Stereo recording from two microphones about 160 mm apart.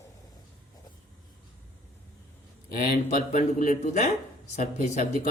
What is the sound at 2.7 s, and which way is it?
A man's voice, 65° left (ahead or behind).